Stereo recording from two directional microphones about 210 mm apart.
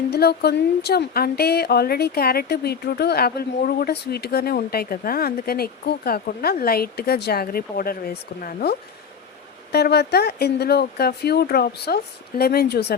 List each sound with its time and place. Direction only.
0.1 s speech: 50° left (ahead or behind)
9.7 s speech: 50° left (ahead or behind)